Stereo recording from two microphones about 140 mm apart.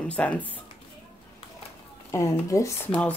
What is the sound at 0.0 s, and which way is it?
Speech, 10° left (ahead or behind).